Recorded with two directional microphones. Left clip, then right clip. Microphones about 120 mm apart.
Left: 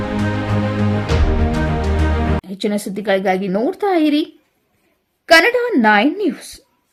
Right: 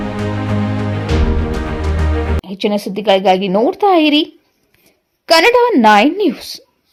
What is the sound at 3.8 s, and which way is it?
Speech, 15° right (ahead or behind).